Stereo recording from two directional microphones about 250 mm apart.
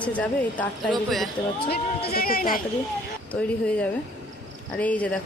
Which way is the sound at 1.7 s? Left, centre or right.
Left.